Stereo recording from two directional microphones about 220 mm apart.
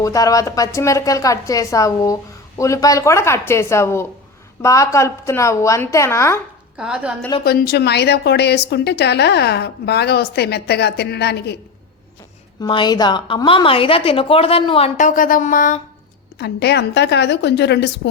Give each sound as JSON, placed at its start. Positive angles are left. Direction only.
{"t": 0.0, "sound": "speech", "side_deg": 15}
{"t": 6.7, "sound": "a woman's voice", "side_deg": -5}
{"t": 7.4, "sound": "a woman's voice", "side_deg": 45}
{"t": 12.6, "sound": "a woman's voice", "side_deg": 20}
{"t": 16.4, "sound": "a woman's voice", "side_deg": 50}